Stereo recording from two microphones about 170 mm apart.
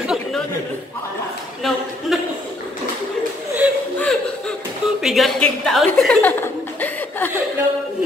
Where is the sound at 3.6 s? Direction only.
5° right (ahead or behind).